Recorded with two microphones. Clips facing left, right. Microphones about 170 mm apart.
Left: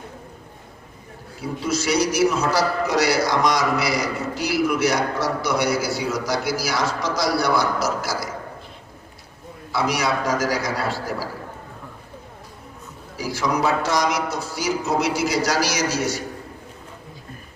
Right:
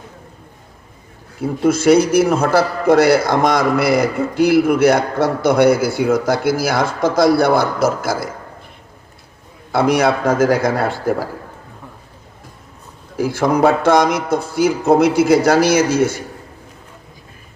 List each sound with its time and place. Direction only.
1.4 s a man's voice: 55° right (ahead or behind)
9.7 s a man's voice: 55° right (ahead or behind)
13.1 s a man's voice: 55° right (ahead or behind)